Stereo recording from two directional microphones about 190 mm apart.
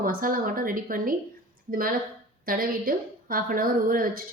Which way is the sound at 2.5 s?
50° right (ahead or behind).